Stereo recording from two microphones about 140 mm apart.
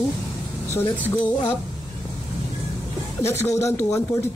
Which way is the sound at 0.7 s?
15° left (ahead or behind).